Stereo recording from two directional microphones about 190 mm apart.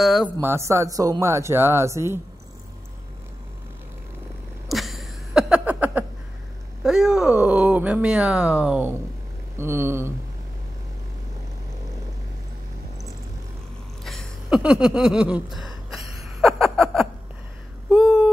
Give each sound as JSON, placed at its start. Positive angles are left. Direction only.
{"t": 0.0, "sound": "speech", "side_deg": 0}
{"t": 0.4, "sound": "speech", "side_deg": -15}
{"t": 4.6, "sound": "a sound", "side_deg": 0}
{"t": 6.8, "sound": "speech", "side_deg": -5}
{"t": 14.0, "sound": "a sound", "side_deg": 0}
{"t": 17.8, "sound": "busy signal", "side_deg": -5}